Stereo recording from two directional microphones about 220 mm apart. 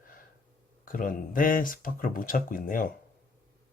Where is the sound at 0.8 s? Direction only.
40° left (ahead or behind).